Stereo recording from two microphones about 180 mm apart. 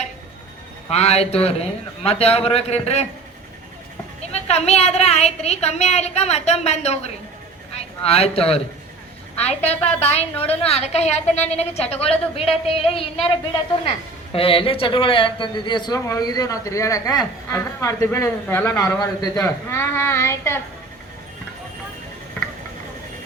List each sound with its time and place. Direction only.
0.9 s a woman's voice: 35° left (ahead or behind)
4.3 s a woman's voice: 35° left (ahead or behind)
14.3 s a man's voice: 30° left (ahead or behind); by 20.6 s 15° left (ahead or behind)